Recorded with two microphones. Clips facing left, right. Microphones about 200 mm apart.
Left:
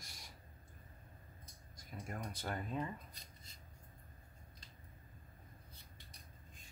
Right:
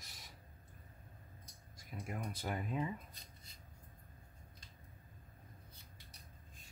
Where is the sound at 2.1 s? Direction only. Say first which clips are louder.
Right 2 dB; 10° right (ahead or behind).